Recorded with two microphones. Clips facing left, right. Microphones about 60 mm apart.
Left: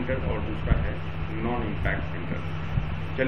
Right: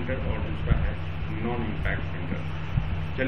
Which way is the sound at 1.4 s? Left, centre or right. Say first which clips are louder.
Left 1 dB; left.